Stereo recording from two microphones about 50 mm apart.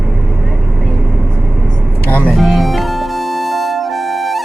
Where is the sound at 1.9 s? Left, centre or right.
Left.